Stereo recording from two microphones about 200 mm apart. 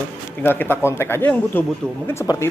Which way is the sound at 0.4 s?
10° left (ahead or behind).